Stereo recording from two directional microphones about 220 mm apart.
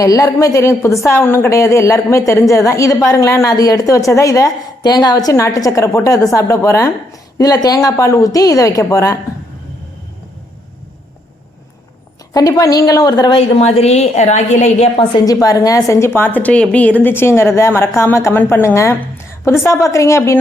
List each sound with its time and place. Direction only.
0.0 s a woman's voice: 15° left (ahead or behind)
12.3 s a woman's voice: 15° left (ahead or behind)
13.6 s a woman's voice: 30° left (ahead or behind); by 20.4 s 15° left (ahead or behind)